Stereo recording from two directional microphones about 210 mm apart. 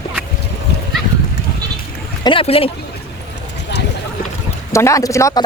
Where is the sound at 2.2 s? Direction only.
25° left (ahead or behind).